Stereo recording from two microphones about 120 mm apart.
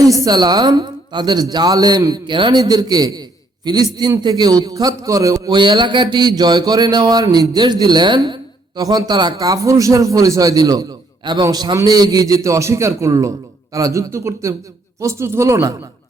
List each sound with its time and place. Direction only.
0.0 s a man's voice: 30° right (ahead or behind)